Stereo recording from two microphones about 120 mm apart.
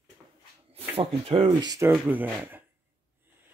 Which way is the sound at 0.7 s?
50° right (ahead or behind).